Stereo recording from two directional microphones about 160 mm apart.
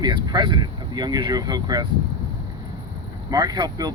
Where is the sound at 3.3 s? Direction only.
25° right (ahead or behind).